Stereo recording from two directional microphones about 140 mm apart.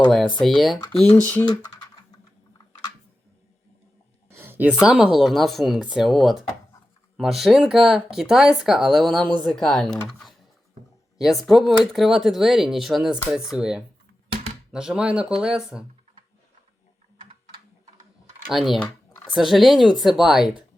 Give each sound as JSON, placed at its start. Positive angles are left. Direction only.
{"t": 0.3, "sound": "speech", "side_deg": 0}
{"t": 1.1, "sound": "speech", "side_deg": 15}
{"t": 4.3, "sound": "a sound", "side_deg": -15}
{"t": 4.7, "sound": "speech", "side_deg": -5}
{"t": 18.5, "sound": "speech", "side_deg": 0}